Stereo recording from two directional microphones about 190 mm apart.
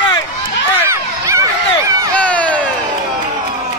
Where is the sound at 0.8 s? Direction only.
15° right (ahead or behind).